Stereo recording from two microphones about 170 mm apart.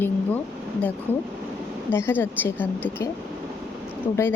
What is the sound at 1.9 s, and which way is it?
A woman's voice, 15° left (ahead or behind).